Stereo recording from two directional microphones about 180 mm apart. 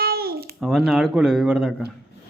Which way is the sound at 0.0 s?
60° right (ahead or behind).